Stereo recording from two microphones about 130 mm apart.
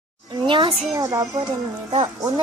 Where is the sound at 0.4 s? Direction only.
40° right (ahead or behind).